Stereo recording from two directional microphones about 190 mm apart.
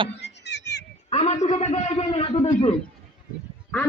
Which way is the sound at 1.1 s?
35° left (ahead or behind).